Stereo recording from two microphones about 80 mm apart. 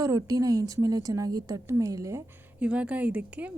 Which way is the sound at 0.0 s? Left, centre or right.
Right.